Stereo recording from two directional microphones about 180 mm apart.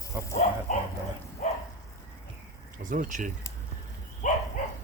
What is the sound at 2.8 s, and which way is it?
Speech, 45° right (ahead or behind).